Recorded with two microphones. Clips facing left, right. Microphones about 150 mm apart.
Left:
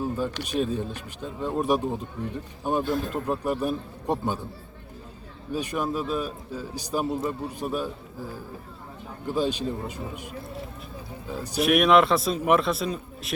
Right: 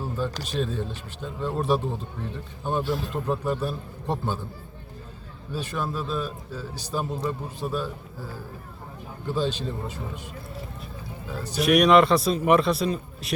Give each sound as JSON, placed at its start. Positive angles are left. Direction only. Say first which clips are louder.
{"t": 0.6, "sound": "a man's voice", "louder": "left 1 dB", "side_deg": 10}
{"t": 2.8, "sound": "speech", "louder": "left 1 dB", "side_deg": 50}
{"t": 3.2, "sound": "a man's voice", "louder": "right 1 dB", "side_deg": 10}
{"t": 5.5, "sound": "a man's voice", "louder": "left 2 dB", "side_deg": 15}
{"t": 11.3, "sound": "a man's voice", "louder": "left 1 dB", "side_deg": 15}
{"t": 11.6, "sound": "a man's voice", "louder": "right 2 dB", "side_deg": 0}